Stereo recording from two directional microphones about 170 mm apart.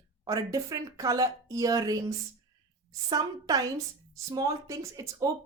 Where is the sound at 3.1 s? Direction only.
20° right (ahead or behind).